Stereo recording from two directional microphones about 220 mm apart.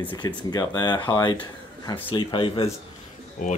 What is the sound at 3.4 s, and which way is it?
Speech, 40° left (ahead or behind).